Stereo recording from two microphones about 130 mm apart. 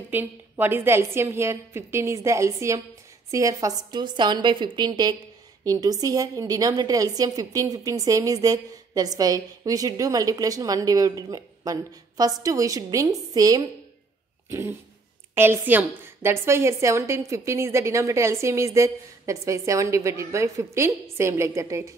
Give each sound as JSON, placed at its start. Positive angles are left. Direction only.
{"t": 0.1, "sound": "a woman's voice", "side_deg": -15}